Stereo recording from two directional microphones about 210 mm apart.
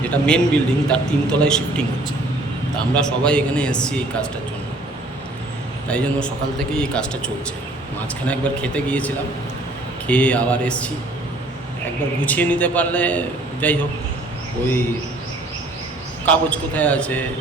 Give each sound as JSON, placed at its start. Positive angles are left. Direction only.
{"t": 0.0, "sound": "a man's voice", "side_deg": 5}
{"t": 2.9, "sound": "a man's voice", "side_deg": 5}
{"t": 5.9, "sound": "a man's voice", "side_deg": 5}
{"t": 8.3, "sound": "a man's voice", "side_deg": 5}
{"t": 12.2, "sound": "a man's voice", "side_deg": 5}
{"t": 16.2, "sound": "a man's voice", "side_deg": 5}